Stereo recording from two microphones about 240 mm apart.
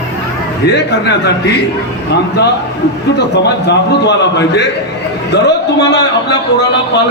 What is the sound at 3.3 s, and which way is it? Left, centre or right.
A man's voice, left.